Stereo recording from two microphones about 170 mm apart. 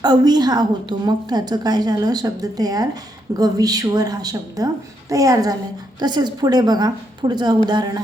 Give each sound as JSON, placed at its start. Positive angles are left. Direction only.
{"t": 0.0, "sound": "a woman's voice", "side_deg": -25}